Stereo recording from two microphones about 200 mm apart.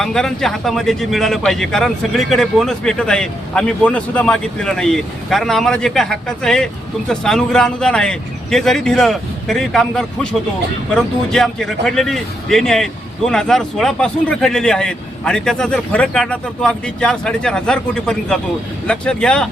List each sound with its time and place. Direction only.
0.0 s speech: centre (ahead or behind)